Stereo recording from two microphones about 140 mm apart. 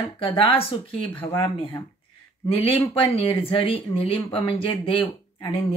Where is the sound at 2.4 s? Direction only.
40° left (ahead or behind).